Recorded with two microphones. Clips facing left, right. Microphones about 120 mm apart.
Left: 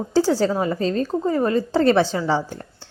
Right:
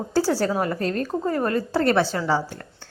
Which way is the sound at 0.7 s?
60° right (ahead or behind).